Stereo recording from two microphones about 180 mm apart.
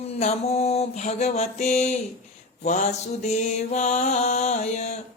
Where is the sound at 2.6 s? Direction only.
45° left (ahead or behind).